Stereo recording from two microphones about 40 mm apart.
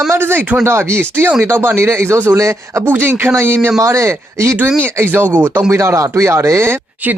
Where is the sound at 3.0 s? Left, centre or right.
Right.